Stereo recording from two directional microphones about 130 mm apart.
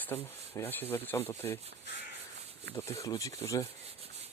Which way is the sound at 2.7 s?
25° left (ahead or behind).